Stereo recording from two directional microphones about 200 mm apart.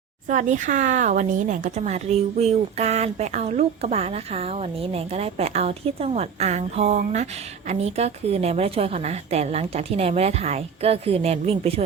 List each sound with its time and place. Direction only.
0.3 s speech: 40° right (ahead or behind)